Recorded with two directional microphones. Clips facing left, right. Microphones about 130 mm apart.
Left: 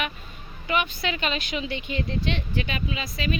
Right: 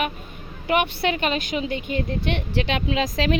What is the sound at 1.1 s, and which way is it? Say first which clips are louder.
A woman's voice: right 4 dB; 45° right (ahead or behind).